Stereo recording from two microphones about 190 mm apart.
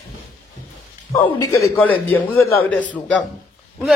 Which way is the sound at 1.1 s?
20° left (ahead or behind).